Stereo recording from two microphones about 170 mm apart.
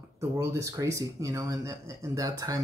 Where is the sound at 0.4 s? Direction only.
15° right (ahead or behind).